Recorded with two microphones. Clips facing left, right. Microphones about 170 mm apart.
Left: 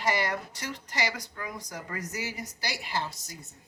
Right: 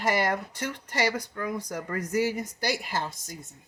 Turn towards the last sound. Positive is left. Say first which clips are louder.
# right 1 dB
turn(degrees=-50)  # may be behind; listen again after turning